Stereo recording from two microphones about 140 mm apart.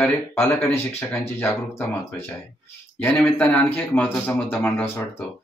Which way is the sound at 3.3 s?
10° left (ahead or behind).